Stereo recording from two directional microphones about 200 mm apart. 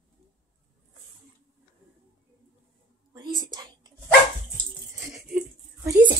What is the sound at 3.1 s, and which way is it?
Whispering, 20° right (ahead or behind).